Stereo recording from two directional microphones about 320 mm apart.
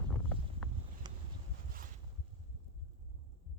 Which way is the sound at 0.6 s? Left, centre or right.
Centre.